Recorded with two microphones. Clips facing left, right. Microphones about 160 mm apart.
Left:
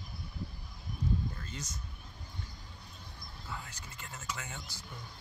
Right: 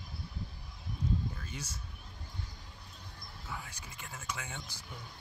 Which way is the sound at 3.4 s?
10° right (ahead or behind).